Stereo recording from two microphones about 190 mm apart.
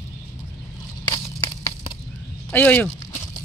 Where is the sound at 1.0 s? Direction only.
20° left (ahead or behind).